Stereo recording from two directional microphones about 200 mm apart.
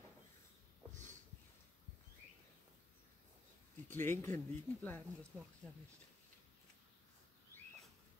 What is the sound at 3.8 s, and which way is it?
Speech, 10° left (ahead or behind).